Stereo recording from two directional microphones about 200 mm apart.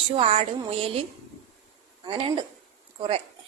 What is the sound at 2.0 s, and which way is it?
Speech, 25° right (ahead or behind).